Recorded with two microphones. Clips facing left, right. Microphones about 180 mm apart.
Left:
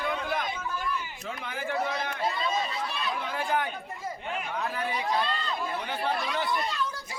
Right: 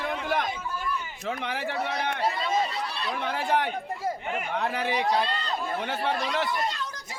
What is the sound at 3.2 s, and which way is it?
Speech, 75° right (ahead or behind).